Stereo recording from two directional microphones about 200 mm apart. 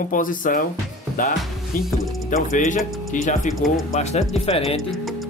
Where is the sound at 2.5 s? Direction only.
40° left (ahead or behind).